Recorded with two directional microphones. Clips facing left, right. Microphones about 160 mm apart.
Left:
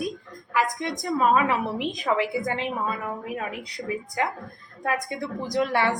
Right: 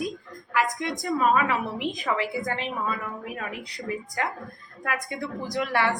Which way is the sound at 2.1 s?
20° left (ahead or behind).